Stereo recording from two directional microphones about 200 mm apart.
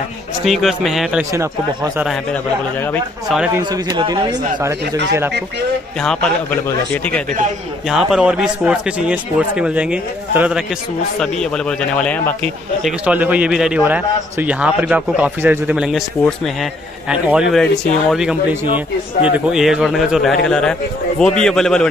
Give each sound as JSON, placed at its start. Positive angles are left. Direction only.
{"t": 0.5, "sound": "a man's voice", "side_deg": 0}
{"t": 3.5, "sound": "speech", "side_deg": -20}
{"t": 6.0, "sound": "a man's voice", "side_deg": 5}
{"t": 7.9, "sound": "a man's voice", "side_deg": -5}
{"t": 12.8, "sound": "a man's voice", "side_deg": -5}